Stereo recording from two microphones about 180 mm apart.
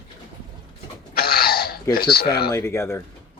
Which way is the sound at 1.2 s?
55° left (ahead or behind).